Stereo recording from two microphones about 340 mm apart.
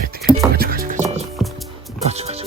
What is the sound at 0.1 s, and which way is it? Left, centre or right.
Music, right.